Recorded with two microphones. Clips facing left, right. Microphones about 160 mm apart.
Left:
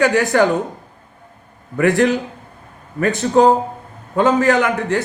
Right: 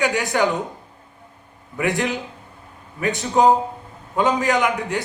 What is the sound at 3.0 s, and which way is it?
Speech, 45° left (ahead or behind).